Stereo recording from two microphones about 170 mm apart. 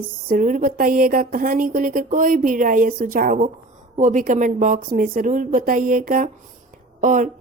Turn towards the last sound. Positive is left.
turn(degrees=-50)  # may be behind; listen again after turning